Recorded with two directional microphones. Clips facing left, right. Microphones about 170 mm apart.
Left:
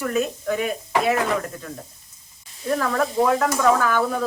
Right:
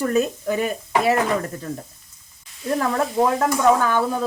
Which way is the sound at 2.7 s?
25° right (ahead or behind).